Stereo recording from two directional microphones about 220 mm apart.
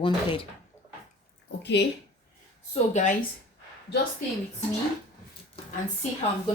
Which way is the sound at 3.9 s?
50° left (ahead or behind).